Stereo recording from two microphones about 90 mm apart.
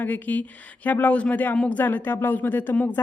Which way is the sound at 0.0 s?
20° left (ahead or behind).